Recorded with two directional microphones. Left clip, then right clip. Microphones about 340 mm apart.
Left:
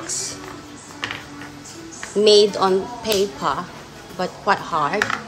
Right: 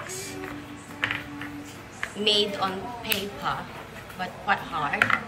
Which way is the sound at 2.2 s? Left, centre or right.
Centre.